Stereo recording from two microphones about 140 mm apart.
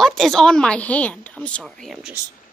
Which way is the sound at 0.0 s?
Centre (ahead or behind).